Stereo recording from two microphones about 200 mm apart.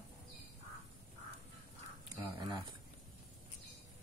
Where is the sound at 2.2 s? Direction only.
20° right (ahead or behind).